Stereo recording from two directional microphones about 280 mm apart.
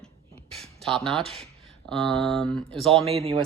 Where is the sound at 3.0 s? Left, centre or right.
Right.